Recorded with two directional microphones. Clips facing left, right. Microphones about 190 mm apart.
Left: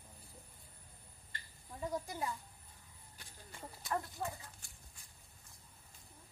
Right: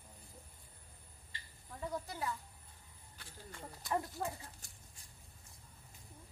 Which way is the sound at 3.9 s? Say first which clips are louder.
Right 2 dB; 20° right (ahead or behind).